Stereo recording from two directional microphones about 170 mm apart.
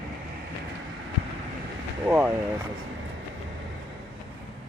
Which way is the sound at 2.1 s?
10° right (ahead or behind).